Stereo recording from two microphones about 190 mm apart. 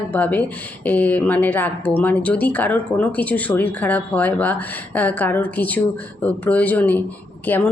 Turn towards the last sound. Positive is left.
turn(degrees=10)  # may be behind; listen again after turning